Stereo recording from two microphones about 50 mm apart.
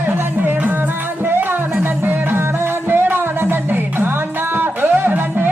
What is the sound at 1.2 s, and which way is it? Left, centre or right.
Music, right.